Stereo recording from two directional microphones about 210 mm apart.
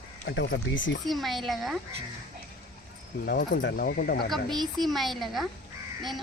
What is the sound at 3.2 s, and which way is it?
Speech, 50° left (ahead or behind).